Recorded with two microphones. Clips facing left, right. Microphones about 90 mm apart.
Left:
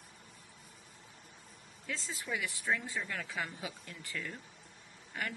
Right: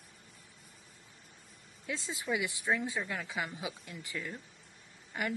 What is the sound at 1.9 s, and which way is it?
Speech, 15° right (ahead or behind).